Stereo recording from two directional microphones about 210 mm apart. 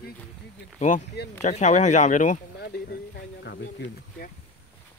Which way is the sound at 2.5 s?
50° left (ahead or behind).